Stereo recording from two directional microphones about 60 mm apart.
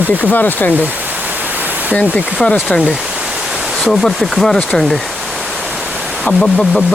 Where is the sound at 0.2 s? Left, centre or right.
Left.